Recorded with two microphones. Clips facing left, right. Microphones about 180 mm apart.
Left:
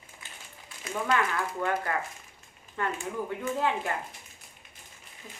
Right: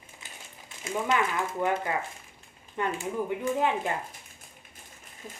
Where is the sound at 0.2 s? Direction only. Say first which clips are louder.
Right 1 dB; 20° right (ahead or behind).